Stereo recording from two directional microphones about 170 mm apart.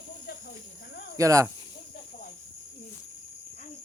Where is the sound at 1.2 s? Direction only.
20° right (ahead or behind).